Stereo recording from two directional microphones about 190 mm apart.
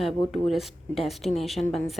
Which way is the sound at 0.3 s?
Centre (ahead or behind).